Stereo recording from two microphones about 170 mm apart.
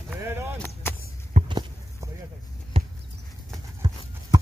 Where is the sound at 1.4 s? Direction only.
45° right (ahead or behind).